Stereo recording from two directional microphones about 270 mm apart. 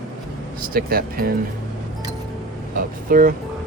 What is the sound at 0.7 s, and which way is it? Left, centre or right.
Speech, right.